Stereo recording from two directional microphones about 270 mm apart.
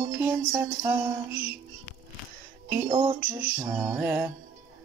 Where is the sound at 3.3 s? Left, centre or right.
Centre.